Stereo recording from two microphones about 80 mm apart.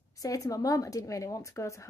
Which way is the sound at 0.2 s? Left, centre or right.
Left.